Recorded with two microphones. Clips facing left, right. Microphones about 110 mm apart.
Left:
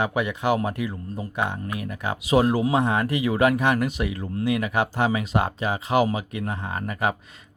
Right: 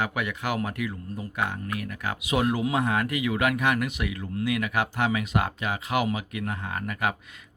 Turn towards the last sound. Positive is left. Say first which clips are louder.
# left 3 dB
turn(degrees=30)  # may be behind; listen again after turning